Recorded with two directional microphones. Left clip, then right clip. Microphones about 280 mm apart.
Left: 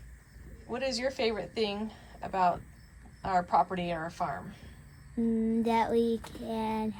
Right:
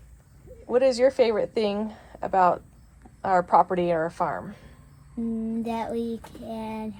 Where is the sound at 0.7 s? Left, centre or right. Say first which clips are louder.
Right 12 dB; centre.